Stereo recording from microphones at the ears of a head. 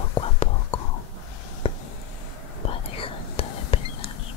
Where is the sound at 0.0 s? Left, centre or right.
Left.